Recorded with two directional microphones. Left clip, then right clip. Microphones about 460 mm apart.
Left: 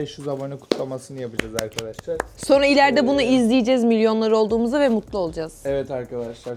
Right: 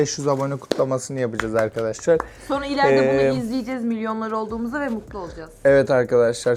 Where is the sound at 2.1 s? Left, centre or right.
Left.